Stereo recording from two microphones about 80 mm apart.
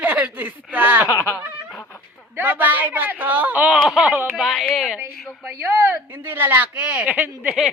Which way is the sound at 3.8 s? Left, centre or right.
Centre.